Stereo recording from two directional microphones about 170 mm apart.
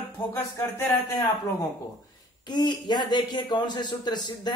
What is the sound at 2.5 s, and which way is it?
A man's voice, 25° left (ahead or behind).